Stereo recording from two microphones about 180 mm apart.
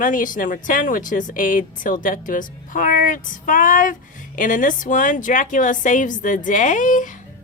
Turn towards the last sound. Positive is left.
turn(degrees=45)  # may be behind; listen again after turning